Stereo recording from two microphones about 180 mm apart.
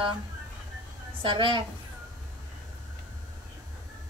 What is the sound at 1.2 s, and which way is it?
Speech, 25° right (ahead or behind).